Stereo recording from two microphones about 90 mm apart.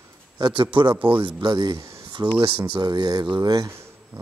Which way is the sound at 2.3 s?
70° right (ahead or behind).